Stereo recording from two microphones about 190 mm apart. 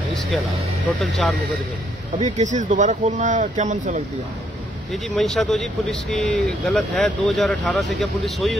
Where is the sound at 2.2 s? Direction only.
40° right (ahead or behind).